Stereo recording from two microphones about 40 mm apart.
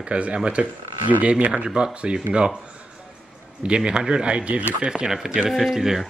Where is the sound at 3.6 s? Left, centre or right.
Right.